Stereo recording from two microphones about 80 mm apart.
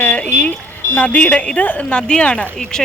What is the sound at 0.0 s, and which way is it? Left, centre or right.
Music, centre.